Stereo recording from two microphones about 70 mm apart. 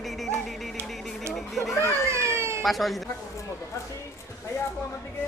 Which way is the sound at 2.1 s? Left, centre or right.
Right.